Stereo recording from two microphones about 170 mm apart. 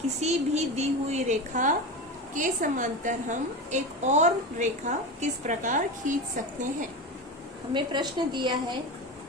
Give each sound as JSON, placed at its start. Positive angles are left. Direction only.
{"t": 0.2, "sound": "a woman's voice", "side_deg": -40}
{"t": 7.7, "sound": "a woman's voice", "side_deg": -25}